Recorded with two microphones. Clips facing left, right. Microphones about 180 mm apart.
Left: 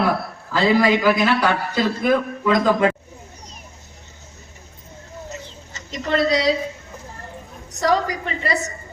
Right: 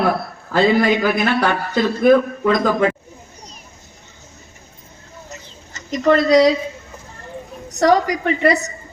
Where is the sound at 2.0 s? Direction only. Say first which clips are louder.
Right 10 dB; 50° right (ahead or behind).